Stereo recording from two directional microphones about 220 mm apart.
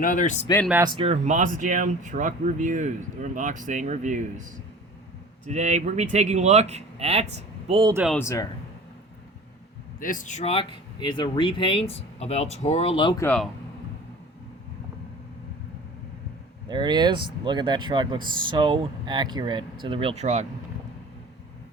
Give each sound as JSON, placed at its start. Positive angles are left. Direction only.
{"t": 0.0, "sound": "speech", "side_deg": 35}
{"t": 0.9, "sound": "speech", "side_deg": -30}
{"t": 5.5, "sound": "speech", "side_deg": -30}
{"t": 7.9, "sound": "speech", "side_deg": 0}
{"t": 8.2, "sound": "speech", "side_deg": 15}
{"t": 10.0, "sound": "speech", "side_deg": 35}
{"t": 13.2, "sound": "speech", "side_deg": 5}
{"t": 16.6, "sound": "speech", "side_deg": -20}